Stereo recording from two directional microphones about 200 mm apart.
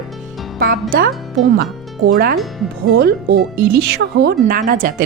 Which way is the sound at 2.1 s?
50° right (ahead or behind).